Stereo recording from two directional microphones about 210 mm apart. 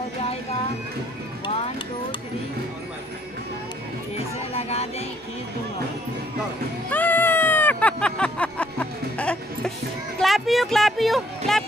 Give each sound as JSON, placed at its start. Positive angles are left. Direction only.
{"t": 4.6, "sound": "music", "side_deg": 30}
{"t": 6.9, "sound": "a sound", "side_deg": 10}
{"t": 10.2, "sound": "speech", "side_deg": 0}